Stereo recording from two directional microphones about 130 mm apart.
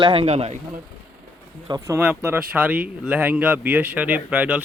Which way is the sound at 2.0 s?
15° right (ahead or behind).